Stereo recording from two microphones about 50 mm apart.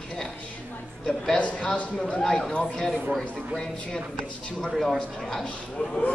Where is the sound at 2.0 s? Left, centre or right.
Centre.